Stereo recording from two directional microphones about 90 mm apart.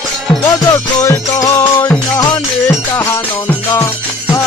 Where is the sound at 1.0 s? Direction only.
30° left (ahead or behind).